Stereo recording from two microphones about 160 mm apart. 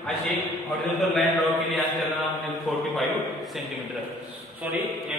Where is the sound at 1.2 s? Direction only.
Centre (ahead or behind).